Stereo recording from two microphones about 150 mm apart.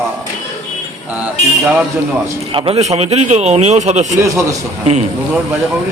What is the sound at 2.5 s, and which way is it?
A man's voice, 40° right (ahead or behind).